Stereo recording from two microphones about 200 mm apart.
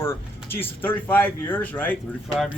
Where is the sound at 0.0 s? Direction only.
10° left (ahead or behind).